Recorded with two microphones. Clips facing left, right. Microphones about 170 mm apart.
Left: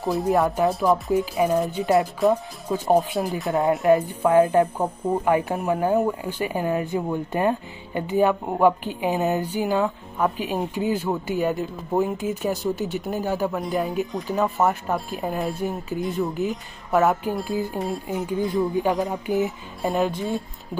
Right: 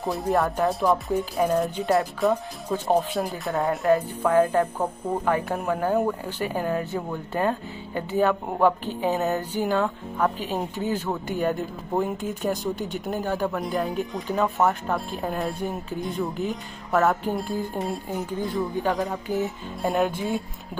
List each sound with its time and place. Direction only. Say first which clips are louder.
0.0 s speech: left 3 dB; centre (ahead or behind)
3.4 s speech: left 3 dB; 20° left (ahead or behind); by 18.2 s centre (ahead or behind)
18.5 s speech: left 3 dB; 10° left (ahead or behind)
19.4 s speech: left 1 dB; centre (ahead or behind)